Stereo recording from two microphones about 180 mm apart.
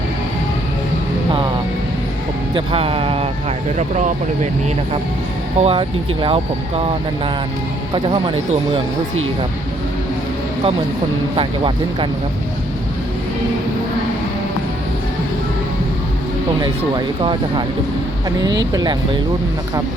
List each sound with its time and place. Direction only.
2.6 s speech: 30° right (ahead or behind)
3.8 s speech: 40° right (ahead or behind)
5.5 s speech: 35° right (ahead or behind)
7.9 s speech: 30° right (ahead or behind)
11.3 s speech: 30° right (ahead or behind)
18.6 s speech: 20° right (ahead or behind)